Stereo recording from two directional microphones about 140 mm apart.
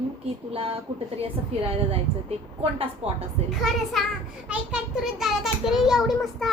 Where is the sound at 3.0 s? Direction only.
45° right (ahead or behind).